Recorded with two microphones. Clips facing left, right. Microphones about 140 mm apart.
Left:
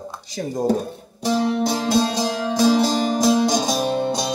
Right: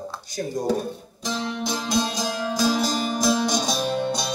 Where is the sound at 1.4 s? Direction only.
35° left (ahead or behind).